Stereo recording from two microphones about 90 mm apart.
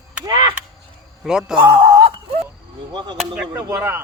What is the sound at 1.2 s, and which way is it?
Speech, 5° right (ahead or behind).